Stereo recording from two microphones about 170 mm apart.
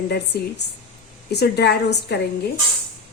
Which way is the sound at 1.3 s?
75° left (ahead or behind).